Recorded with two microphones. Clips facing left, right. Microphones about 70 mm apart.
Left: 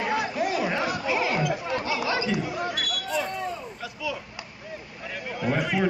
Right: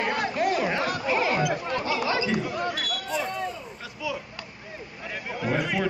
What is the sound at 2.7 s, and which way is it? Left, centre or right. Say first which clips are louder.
Basketball bounce: even; right.